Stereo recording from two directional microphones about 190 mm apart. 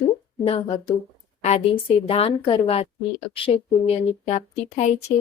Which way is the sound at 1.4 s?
30° left (ahead or behind).